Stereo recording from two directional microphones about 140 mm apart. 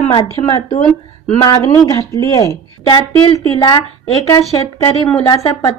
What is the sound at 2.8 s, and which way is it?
Speech, 35° left (ahead or behind).